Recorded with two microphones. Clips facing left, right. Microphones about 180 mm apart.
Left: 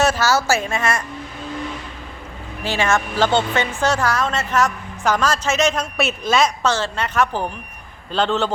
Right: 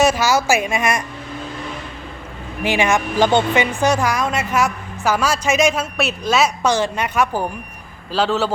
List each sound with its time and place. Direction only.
0.0 s speech: 15° right (ahead or behind)
2.6 s speech: 15° right (ahead or behind)